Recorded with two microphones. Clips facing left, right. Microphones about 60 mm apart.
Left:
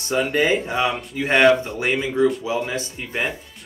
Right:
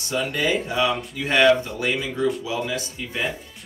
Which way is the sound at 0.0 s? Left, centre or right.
Left.